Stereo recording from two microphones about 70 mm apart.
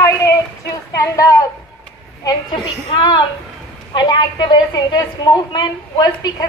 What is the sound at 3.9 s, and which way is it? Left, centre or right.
A woman's voice, left.